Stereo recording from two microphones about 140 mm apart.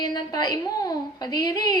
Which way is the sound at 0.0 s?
30° left (ahead or behind).